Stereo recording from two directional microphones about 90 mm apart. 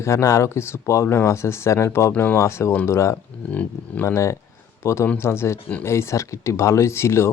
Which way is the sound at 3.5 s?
15° left (ahead or behind).